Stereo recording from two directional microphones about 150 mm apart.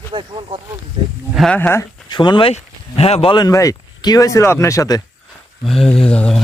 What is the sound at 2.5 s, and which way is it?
Speech, 45° left (ahead or behind).